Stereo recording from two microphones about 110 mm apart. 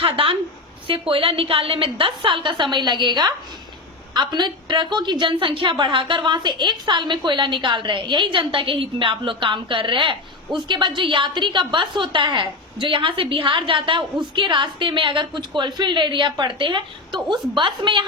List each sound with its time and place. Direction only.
0.0 s a woman's voice: 55° right (ahead or behind)